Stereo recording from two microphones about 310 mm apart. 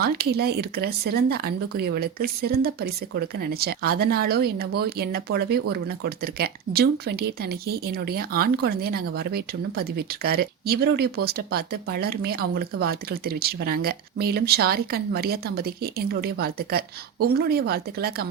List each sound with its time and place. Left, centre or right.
0.0 s speech: right